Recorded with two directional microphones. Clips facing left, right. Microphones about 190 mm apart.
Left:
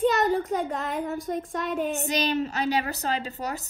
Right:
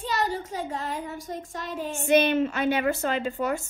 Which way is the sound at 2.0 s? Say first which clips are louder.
Right 5 dB; 40° left (ahead or behind).